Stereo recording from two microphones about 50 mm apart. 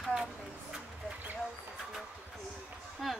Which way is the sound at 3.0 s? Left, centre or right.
Centre.